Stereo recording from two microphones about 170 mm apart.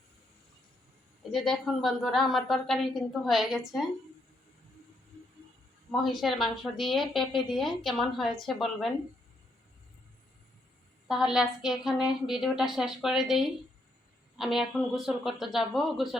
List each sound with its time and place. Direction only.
1.3 s a woman's voice: centre (ahead or behind)
5.9 s a woman's voice: centre (ahead or behind)
11.1 s a woman's voice: 5° right (ahead or behind)